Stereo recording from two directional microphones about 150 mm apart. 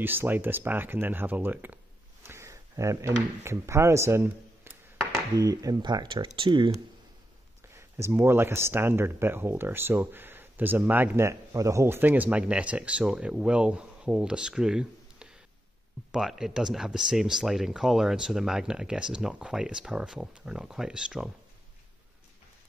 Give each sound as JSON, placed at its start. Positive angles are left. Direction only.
{"t": 0.0, "sound": "speech", "side_deg": -15}
{"t": 7.7, "sound": "speech", "side_deg": -15}